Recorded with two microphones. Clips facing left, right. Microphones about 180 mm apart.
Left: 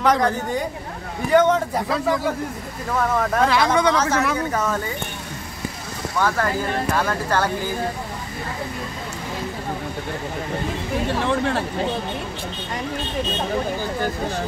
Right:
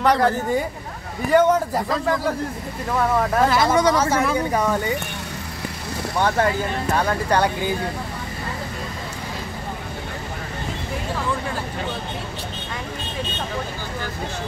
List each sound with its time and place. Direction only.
0.0 s speech: centre (ahead or behind)
6.1 s speech: 25° right (ahead or behind)
11.1 s speech: 70° left (ahead or behind)